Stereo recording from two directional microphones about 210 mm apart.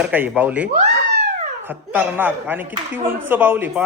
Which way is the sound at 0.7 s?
50° right (ahead or behind).